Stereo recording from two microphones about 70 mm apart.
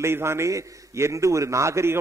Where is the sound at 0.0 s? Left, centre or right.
Right.